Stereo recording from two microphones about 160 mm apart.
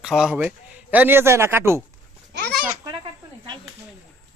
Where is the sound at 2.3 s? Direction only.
90° right.